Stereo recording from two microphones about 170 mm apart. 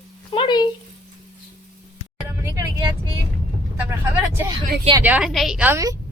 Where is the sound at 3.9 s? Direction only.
15° right (ahead or behind).